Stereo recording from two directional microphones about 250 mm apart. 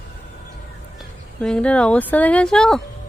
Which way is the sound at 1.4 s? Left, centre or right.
Centre.